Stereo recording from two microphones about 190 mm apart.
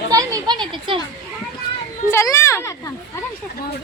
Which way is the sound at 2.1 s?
15° left (ahead or behind).